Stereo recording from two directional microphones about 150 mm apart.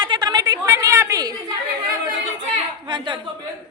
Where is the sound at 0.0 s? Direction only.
30° right (ahead or behind).